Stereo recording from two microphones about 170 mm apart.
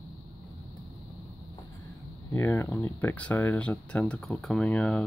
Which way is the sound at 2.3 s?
15° left (ahead or behind).